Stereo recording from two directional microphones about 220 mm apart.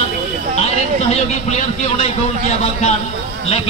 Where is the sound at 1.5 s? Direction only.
30° left (ahead or behind).